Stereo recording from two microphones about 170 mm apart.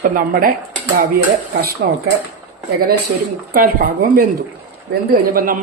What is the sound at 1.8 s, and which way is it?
Speech, 70° right (ahead or behind).